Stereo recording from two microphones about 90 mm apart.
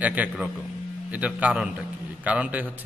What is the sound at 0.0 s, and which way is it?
A man's voice, 15° right (ahead or behind).